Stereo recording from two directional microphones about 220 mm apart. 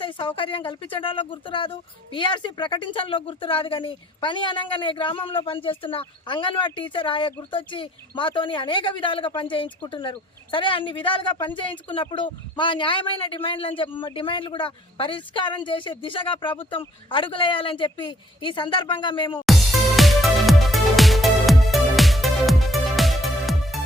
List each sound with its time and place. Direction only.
0.0 s speech: 20° left (ahead or behind)
19.5 s music: centre (ahead or behind)